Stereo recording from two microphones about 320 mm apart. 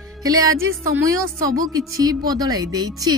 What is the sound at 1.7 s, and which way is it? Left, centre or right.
Speech, centre.